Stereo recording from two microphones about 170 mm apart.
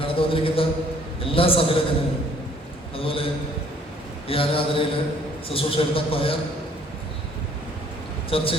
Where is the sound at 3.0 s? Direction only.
30° left (ahead or behind).